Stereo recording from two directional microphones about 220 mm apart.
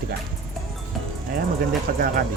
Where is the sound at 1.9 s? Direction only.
40° right (ahead or behind).